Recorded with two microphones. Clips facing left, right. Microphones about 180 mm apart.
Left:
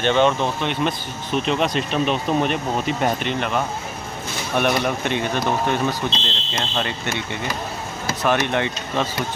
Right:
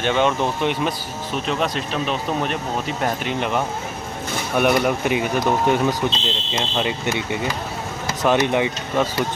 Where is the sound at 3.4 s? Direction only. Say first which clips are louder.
Right 1 dB; 15° right (ahead or behind).